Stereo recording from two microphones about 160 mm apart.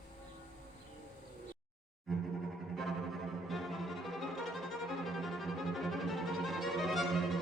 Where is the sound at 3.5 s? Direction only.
Centre (ahead or behind).